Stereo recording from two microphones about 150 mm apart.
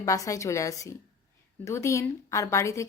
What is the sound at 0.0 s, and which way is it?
A woman's voice, 20° left (ahead or behind).